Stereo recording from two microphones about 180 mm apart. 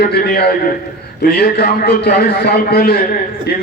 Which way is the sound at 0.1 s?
60° left (ahead or behind).